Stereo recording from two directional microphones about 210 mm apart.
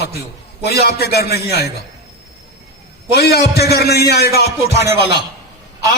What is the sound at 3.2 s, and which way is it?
A man's voice, 50° left (ahead or behind).